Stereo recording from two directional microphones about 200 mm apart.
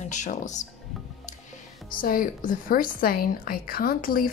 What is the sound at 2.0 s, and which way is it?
A woman's voice, 45° left (ahead or behind).